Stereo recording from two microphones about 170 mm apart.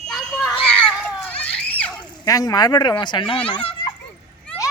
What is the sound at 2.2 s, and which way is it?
Speech, 20° left (ahead or behind).